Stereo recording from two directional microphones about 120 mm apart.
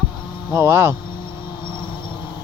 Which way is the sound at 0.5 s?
20° right (ahead or behind).